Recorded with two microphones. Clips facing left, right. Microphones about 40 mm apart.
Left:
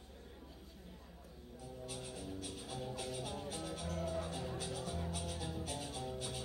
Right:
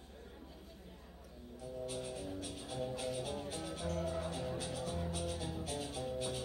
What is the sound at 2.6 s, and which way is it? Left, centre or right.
Music, centre.